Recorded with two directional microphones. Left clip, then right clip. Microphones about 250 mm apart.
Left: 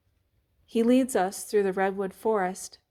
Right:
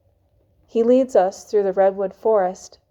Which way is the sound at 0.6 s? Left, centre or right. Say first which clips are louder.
Right 8 dB; left.